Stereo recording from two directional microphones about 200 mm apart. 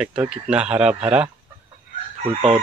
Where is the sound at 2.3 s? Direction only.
30° right (ahead or behind).